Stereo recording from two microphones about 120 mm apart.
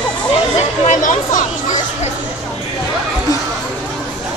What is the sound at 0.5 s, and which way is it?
Speech, 90° left.